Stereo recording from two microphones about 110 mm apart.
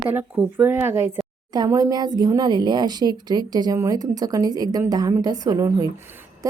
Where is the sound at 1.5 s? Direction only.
35° right (ahead or behind).